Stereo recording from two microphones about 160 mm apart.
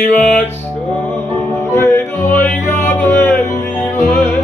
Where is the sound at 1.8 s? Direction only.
15° left (ahead or behind).